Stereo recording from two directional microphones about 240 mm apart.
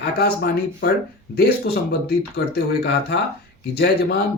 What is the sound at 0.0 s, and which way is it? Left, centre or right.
Speech, left.